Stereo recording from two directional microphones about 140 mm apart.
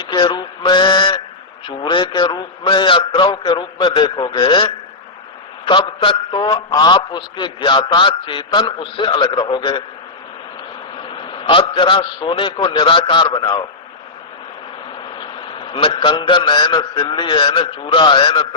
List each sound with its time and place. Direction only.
0.0 s a man's voice: 35° left (ahead or behind)
11.1 s a man's voice: 35° left (ahead or behind)
15.2 s a man's voice: 35° left (ahead or behind)